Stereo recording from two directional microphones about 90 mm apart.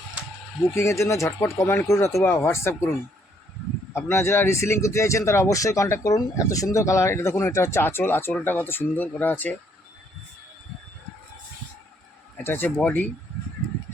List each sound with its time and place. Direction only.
0.7 s speech: 30° left (ahead or behind)
3.9 s speech: 30° left (ahead or behind)
12.4 s speech: 25° left (ahead or behind)